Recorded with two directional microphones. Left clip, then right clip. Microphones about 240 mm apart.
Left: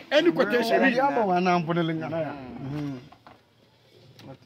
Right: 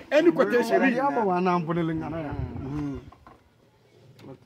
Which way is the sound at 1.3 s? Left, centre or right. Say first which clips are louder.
Left 1 dB; left.